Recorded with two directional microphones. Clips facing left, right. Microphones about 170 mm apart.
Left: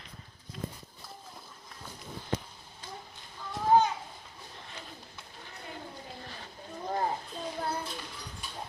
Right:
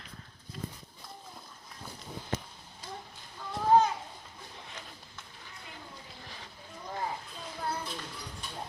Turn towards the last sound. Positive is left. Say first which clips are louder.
# left 5 dB
turn(degrees=45)  # may be behind; listen again after turning